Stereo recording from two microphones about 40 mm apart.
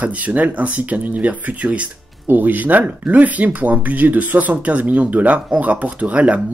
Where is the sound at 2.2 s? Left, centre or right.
Right.